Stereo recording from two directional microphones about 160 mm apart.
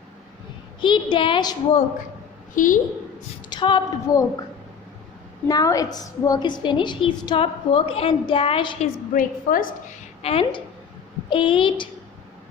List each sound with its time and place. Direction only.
0.8 s a woman's voice: 30° left (ahead or behind)
2.6 s a woman's voice: 55° left (ahead or behind)
3.5 s a woman's voice: 30° left (ahead or behind)
5.5 s a woman's voice: 25° left (ahead or behind)
9.1 s a woman's voice: 60° left (ahead or behind)
10.2 s a woman's voice: 35° left (ahead or behind)